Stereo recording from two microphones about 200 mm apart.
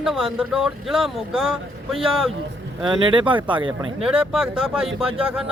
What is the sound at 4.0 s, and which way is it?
Speech, 5° right (ahead or behind).